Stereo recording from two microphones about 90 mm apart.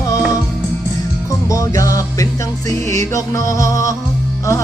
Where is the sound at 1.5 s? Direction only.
40° left (ahead or behind).